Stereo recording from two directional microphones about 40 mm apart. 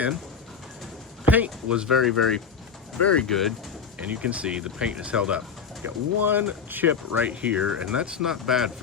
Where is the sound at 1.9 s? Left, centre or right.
Centre.